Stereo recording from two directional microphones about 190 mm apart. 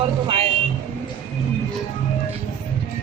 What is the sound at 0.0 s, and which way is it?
Vehicle, 30° right (ahead or behind).